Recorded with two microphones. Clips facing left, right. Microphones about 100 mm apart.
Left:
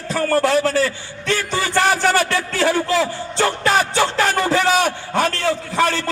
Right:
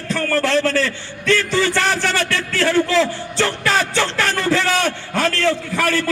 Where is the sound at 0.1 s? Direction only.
40° left (ahead or behind).